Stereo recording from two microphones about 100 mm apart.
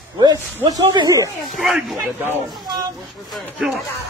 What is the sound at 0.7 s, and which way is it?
Speech, 40° right (ahead or behind).